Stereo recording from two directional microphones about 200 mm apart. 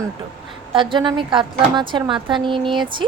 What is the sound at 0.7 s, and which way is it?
A woman's voice, 25° right (ahead or behind).